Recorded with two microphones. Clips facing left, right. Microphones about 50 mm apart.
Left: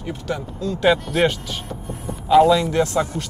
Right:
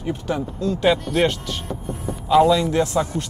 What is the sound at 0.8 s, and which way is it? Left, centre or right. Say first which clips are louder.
Speech: left 1 dB; centre.